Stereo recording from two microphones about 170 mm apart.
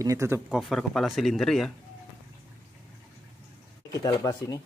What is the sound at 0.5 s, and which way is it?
Speech, centre (ahead or behind).